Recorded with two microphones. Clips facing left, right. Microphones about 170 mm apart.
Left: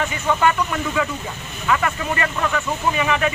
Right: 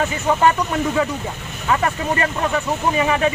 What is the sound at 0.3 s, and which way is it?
Speech, 35° right (ahead or behind).